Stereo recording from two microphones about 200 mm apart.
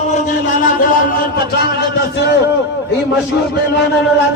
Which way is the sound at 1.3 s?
55° left (ahead or behind).